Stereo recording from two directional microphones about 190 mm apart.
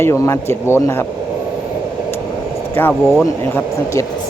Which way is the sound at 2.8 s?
10° left (ahead or behind).